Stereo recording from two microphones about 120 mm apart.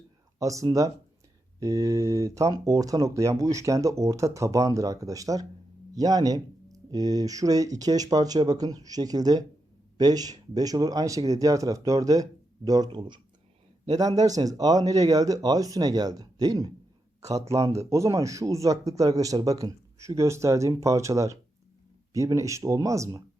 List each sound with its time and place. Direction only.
0.3 s speech: 25° right (ahead or behind)
12.9 s a man's voice: 40° right (ahead or behind)